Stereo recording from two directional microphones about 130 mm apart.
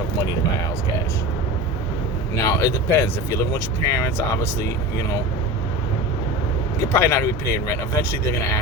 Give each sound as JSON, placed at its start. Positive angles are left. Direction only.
{"t": 2.3, "sound": "speech", "side_deg": 25}
{"t": 6.8, "sound": "speech", "side_deg": 15}